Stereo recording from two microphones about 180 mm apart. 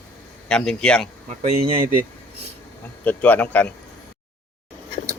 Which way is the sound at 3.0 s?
10° left (ahead or behind).